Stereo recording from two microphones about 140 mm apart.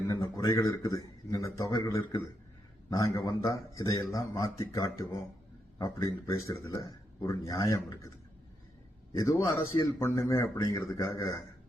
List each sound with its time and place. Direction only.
0.1 s a sound: 25° left (ahead or behind)
0.9 s a man's voice: 25° left (ahead or behind)
9.1 s a man's voice: 25° left (ahead or behind)